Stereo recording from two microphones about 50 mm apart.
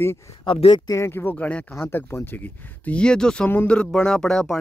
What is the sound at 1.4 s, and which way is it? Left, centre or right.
Speech, left.